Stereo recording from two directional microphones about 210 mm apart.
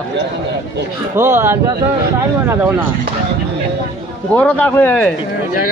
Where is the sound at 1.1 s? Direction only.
10° right (ahead or behind).